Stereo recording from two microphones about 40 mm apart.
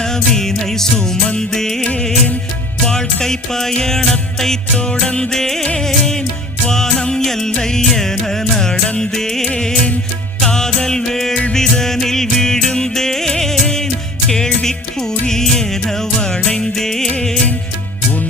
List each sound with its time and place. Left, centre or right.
0.0 s music: centre
1.8 s music: left
4.8 s music: left